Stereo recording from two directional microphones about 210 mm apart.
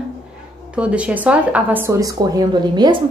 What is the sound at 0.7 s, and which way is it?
A woman's voice, 5° right (ahead or behind).